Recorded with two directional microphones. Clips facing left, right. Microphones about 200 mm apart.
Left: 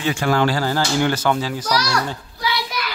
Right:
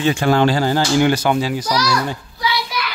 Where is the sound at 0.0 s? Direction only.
25° right (ahead or behind).